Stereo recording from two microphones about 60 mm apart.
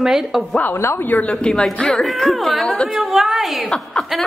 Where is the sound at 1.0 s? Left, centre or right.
Left; by 2.6 s centre.